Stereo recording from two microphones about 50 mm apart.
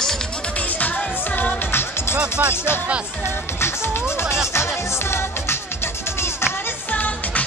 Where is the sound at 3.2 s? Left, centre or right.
Left.